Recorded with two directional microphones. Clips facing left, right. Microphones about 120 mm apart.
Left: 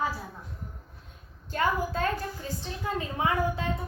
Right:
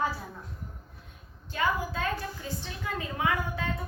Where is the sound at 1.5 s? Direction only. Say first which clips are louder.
Left 2 dB; 40° left (ahead or behind).